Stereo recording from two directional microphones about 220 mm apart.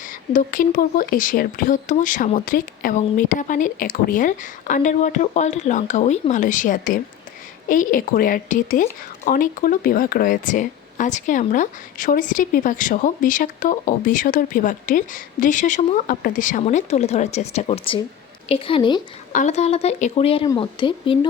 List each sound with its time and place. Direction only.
0.0 s a woman's voice: 35° left (ahead or behind); by 19.0 s 20° left (ahead or behind)
19.3 s a woman's voice: 35° left (ahead or behind)